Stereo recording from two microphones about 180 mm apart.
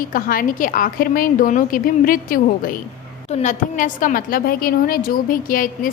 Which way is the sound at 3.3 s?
40° left (ahead or behind).